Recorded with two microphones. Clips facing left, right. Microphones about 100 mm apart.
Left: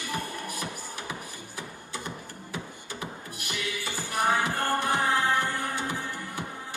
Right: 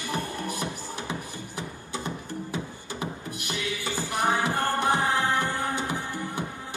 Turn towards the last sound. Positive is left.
turn(degrees=-20)  # may be behind; listen again after turning